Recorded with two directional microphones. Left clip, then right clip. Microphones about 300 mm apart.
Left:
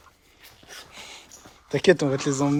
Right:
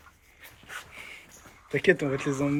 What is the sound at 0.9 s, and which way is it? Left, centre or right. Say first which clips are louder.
Dog: left 1 dB; centre.